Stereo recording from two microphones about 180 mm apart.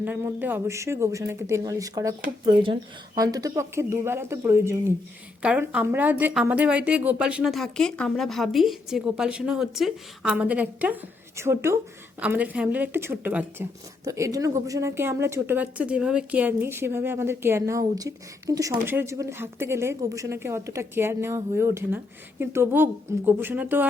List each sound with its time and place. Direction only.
0.0 s speech: 10° right (ahead or behind)
3.2 s speech: 20° right (ahead or behind)